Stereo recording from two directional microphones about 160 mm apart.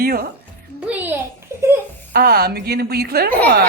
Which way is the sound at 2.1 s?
75° right (ahead or behind).